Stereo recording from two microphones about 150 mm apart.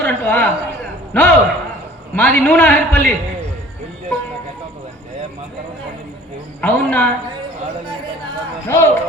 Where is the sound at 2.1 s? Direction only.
15° left (ahead or behind).